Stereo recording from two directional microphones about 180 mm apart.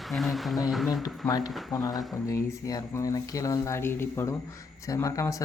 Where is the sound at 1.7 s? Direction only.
20° left (ahead or behind).